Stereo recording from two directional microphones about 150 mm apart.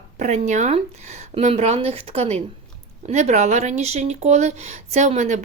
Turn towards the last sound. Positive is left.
turn(degrees=-55)  # may be behind; listen again after turning